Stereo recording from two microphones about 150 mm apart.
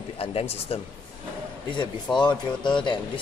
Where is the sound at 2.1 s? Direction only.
30° left (ahead or behind).